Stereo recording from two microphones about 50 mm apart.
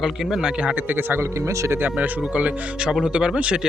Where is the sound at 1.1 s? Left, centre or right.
Right.